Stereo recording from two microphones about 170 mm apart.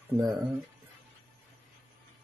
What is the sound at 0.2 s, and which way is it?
Speech, 20° right (ahead or behind).